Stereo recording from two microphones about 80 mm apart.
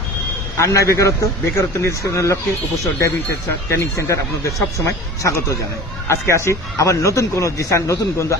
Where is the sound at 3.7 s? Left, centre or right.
Left.